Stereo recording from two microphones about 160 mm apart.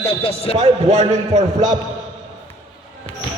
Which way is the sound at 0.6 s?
45° right (ahead or behind).